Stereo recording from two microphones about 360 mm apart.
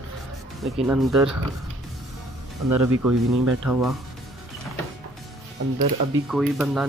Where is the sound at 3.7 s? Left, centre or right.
Centre.